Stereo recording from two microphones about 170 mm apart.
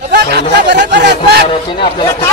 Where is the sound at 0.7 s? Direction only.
90° right.